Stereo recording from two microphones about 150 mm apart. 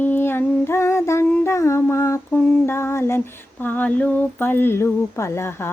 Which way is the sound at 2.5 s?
15° left (ahead or behind).